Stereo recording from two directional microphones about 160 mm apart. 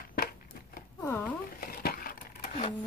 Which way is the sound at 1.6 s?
70° left (ahead or behind).